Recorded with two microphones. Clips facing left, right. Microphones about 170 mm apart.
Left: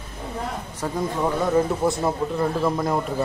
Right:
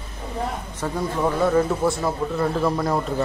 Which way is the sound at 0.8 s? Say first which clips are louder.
Right 1 dB; 15° left (ahead or behind).